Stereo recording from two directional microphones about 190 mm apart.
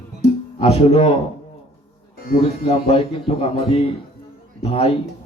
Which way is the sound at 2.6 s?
35° left (ahead or behind).